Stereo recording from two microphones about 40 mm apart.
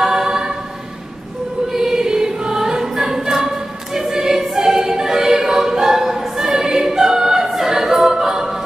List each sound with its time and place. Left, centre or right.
0.0 s choir: centre
1.7 s choir: centre